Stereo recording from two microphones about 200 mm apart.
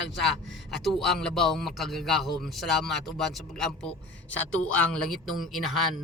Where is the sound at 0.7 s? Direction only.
Centre (ahead or behind).